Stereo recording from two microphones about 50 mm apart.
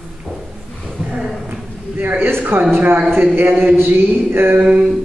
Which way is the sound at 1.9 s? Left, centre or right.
Right.